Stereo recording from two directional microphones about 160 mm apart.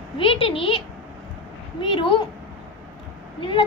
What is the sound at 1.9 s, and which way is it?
Speech, 30° left (ahead or behind).